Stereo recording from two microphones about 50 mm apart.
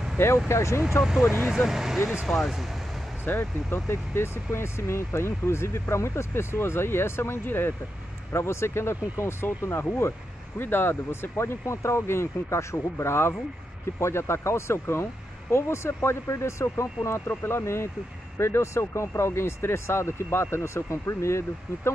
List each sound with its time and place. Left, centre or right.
0.5 s speech: left
1.4 s speech: centre
3.3 s speech: left
8.3 s speech: left
10.6 s speech: left
17.3 s speech: left